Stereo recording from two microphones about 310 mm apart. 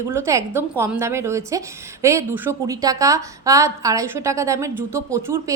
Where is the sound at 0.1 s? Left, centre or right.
Centre.